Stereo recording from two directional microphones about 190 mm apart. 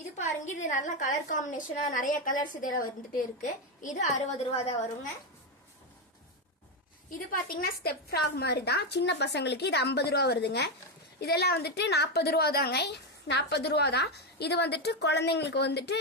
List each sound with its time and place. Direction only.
0.2 s a woman's voice: 40° left (ahead or behind)
7.1 s a woman's voice: 50° left (ahead or behind)